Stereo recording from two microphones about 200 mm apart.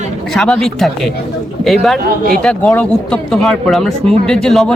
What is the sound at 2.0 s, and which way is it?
Speech, 45° right (ahead or behind).